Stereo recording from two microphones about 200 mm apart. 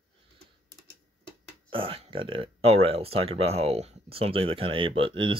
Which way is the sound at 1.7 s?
25° right (ahead or behind).